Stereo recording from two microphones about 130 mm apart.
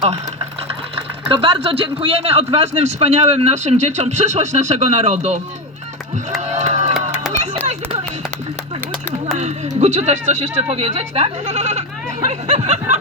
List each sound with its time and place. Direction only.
0.9 s speech: 45° right (ahead or behind); by 5.4 s 60° right (ahead or behind)
6.5 s crowd: 60° right (ahead or behind)
9.4 s speech: 60° right (ahead or behind)